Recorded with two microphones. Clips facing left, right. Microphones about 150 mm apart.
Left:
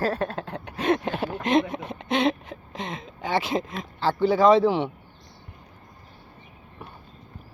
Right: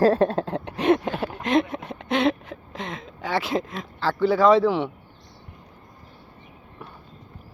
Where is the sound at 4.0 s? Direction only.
25° left (ahead or behind).